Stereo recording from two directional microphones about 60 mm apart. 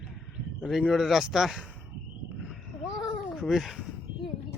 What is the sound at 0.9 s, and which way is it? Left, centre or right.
Speech, centre.